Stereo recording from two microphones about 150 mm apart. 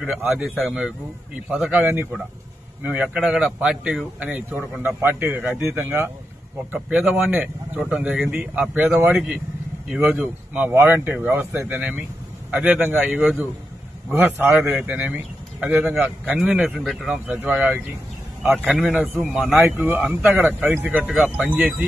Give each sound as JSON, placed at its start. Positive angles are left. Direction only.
{"t": 0.0, "sound": "a man's voice", "side_deg": -5}